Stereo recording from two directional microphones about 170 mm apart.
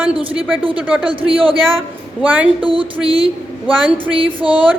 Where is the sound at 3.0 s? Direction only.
35° right (ahead or behind).